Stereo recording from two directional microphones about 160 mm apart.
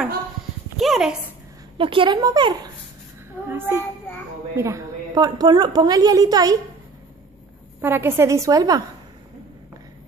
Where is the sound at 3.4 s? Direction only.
15° right (ahead or behind).